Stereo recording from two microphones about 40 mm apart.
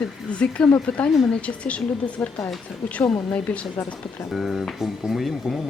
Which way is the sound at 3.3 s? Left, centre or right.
Left.